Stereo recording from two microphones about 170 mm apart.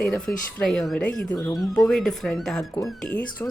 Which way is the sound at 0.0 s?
Centre (ahead or behind).